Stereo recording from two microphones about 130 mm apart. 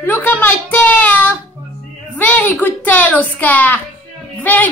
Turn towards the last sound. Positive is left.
turn(degrees=10)  # may be behind; listen again after turning